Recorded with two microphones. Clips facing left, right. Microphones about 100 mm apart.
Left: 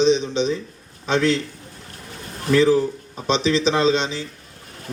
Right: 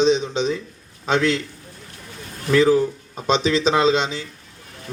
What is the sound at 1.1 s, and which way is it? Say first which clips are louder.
Speech: even; 35° left (ahead or behind).